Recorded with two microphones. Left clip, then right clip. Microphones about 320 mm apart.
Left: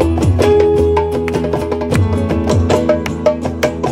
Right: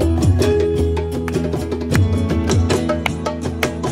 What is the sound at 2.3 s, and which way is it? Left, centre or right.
Music, left.